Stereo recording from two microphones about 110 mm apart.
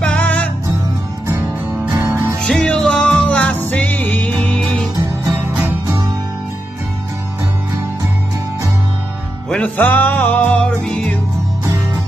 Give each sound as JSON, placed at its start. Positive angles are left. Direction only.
{"t": 0.0, "sound": "music", "side_deg": 10}
{"t": 1.9, "sound": "music", "side_deg": -30}
{"t": 2.4, "sound": "music", "side_deg": 5}
{"t": 5.3, "sound": "music", "side_deg": -15}
{"t": 9.5, "sound": "music", "side_deg": 15}